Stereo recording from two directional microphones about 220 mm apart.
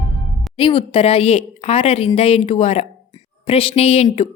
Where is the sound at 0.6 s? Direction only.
25° left (ahead or behind).